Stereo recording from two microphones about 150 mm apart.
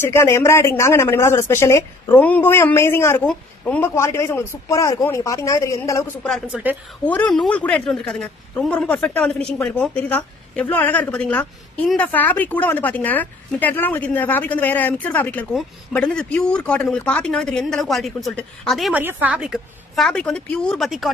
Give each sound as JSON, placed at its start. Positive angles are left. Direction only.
{"t": 0.0, "sound": "a woman's voice", "side_deg": 15}
{"t": 6.5, "sound": "a woman's voice", "side_deg": -10}
{"t": 7.1, "sound": "a woman's voice", "side_deg": 10}
{"t": 18.9, "sound": "speech", "side_deg": -10}